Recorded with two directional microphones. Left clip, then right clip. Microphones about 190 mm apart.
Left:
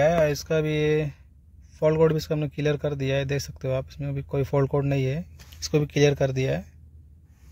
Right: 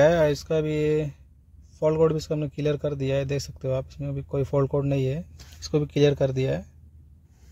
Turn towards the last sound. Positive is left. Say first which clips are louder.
# even
turn(degrees=-10)  # may be behind; listen again after turning